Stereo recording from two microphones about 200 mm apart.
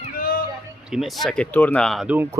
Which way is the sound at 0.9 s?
Centre (ahead or behind).